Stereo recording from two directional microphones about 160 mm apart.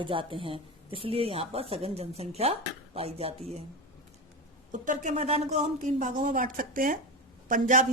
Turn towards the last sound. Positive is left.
turn(degrees=-55)  # may be behind; listen again after turning